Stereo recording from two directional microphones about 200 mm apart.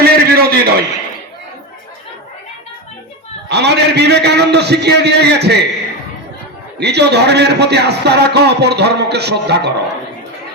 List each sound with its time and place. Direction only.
0.0 s a sound: 50° right (ahead or behind)
3.5 s a man's voice: 55° right (ahead or behind)
6.7 s a man's voice: 55° right (ahead or behind)